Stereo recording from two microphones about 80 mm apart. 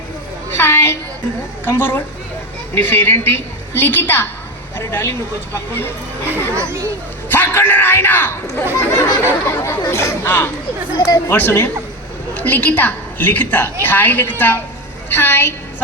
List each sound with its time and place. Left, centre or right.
0.5 s a sound: left
1.6 s a woman's voice: left
4.8 s a sound: left
5.5 s a woman's voice: left
6.3 s a child's voice: right
7.3 s a man's voice: left
9.0 s a sound: left
10.2 s a woman's voice: left
10.9 s speech: left
11.3 s a woman's voice: left